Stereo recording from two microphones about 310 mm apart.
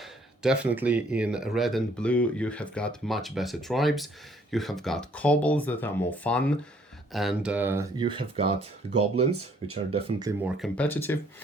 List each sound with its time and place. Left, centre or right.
0.0 s speech: centre
10.6 s speech: centre